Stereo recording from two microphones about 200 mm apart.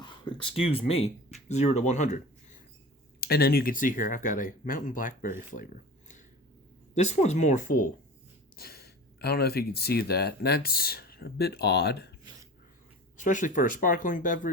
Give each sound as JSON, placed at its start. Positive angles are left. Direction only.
{"t": 0.0, "sound": "speech", "side_deg": 25}
{"t": 3.2, "sound": "speech", "side_deg": 50}
{"t": 8.5, "sound": "speech", "side_deg": 50}
{"t": 13.1, "sound": "speech", "side_deg": 40}